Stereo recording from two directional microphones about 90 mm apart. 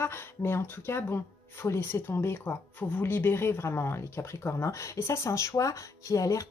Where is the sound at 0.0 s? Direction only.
25° left (ahead or behind).